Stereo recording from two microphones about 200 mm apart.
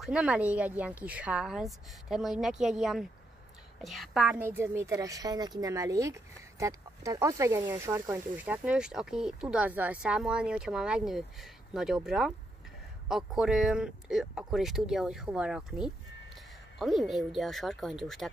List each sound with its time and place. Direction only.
0.0 s a woman's voice: 5° right (ahead or behind)